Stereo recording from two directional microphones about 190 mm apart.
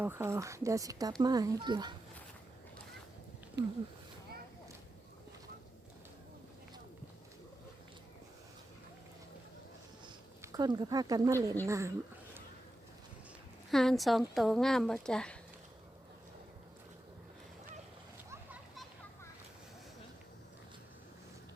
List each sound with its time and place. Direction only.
0.0 s a child's voice: 10° right (ahead or behind)
3.6 s speech: 65° right (ahead or behind)
10.4 s speech: 20° right (ahead or behind)
13.7 s speech: centre (ahead or behind)